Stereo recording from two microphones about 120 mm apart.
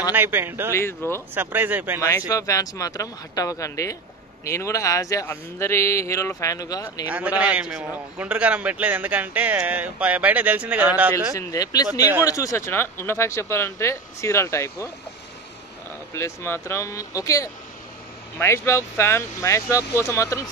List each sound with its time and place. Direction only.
0.1 s a man's voice: 15° right (ahead or behind)
0.7 s a man's voice: 20° left (ahead or behind)
1.3 s a man's voice: 15° right (ahead or behind)
2.0 s a man's voice: 25° left (ahead or behind)
7.1 s a man's voice: 10° right (ahead or behind)
11.3 s a man's voice: 30° left (ahead or behind)
16.2 s a man's voice: 20° left (ahead or behind)